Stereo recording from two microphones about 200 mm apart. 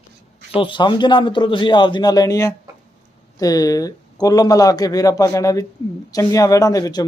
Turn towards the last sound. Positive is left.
turn(degrees=15)  # may be behind; listen again after turning